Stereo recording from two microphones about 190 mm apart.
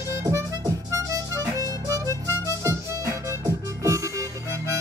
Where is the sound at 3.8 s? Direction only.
15° right (ahead or behind).